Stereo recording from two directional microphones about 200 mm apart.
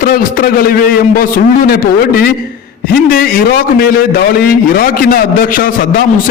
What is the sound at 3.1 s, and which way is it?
A man's voice, 45° left (ahead or behind).